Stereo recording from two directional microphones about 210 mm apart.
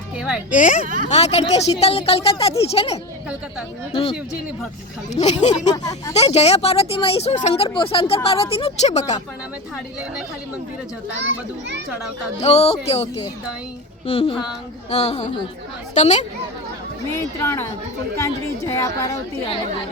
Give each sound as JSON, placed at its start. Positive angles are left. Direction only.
{"t": 0.2, "sound": "speech", "side_deg": -5}
{"t": 0.5, "sound": "speech", "side_deg": 35}
{"t": 5.1, "sound": "speech", "side_deg": 35}
{"t": 5.7, "sound": "speech", "side_deg": 15}
{"t": 6.1, "sound": "speech", "side_deg": 30}
{"t": 12.4, "sound": "speech", "side_deg": 30}
{"t": 14.1, "sound": "speech", "side_deg": 25}
{"t": 17.4, "sound": "speech", "side_deg": 15}